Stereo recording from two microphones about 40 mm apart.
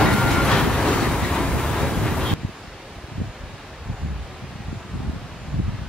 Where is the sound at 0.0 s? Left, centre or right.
Centre.